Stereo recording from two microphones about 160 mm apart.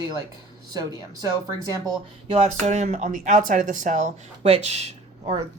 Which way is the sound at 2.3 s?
45° right (ahead or behind).